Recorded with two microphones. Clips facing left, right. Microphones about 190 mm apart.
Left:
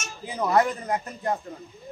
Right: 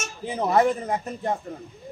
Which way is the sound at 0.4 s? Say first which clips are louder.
Right 2 dB; 25° right (ahead or behind).